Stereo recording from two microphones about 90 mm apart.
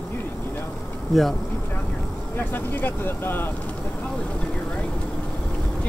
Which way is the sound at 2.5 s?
25° left (ahead or behind).